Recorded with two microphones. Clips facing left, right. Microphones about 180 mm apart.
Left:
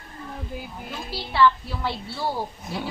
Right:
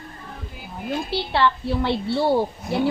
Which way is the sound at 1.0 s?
65° right (ahead or behind).